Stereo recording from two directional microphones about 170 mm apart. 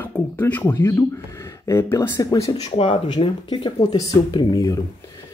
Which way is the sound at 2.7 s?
30° left (ahead or behind).